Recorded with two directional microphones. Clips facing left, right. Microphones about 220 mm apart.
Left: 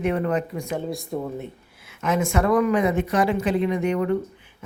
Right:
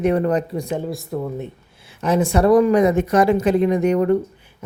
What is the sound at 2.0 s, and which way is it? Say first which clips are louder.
Speech: right 5 dB; 35° right (ahead or behind).